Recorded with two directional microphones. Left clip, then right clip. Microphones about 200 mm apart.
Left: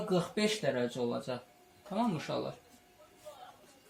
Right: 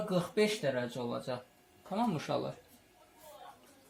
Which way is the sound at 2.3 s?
40° right (ahead or behind).